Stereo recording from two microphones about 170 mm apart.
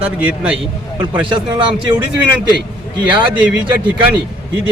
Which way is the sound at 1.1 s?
30° right (ahead or behind).